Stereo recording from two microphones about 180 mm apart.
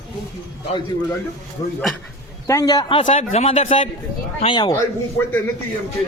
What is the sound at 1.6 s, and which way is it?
A man's voice, 20° left (ahead or behind).